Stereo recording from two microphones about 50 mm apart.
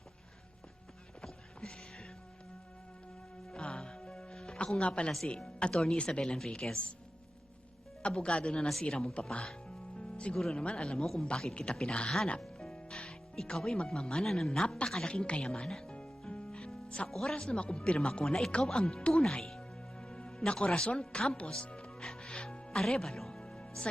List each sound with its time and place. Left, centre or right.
3.5 s music: centre
5.5 s speech: centre
8.0 s speech: left
10.0 s music: left
10.3 s speech: centre
10.6 s speech: left
12.5 s music: centre
14.8 s a woman's voice: centre
15.1 s music: left
17.1 s speech: centre
17.5 s speech: left
21.6 s music: centre